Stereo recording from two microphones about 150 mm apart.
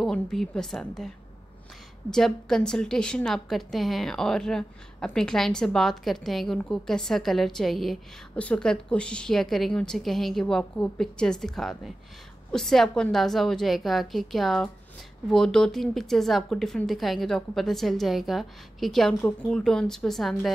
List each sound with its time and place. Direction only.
0.0 s a woman's voice: centre (ahead or behind)